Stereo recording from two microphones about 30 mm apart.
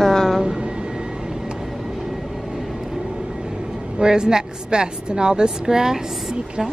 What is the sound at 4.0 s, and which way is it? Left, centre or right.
A woman's voice, right.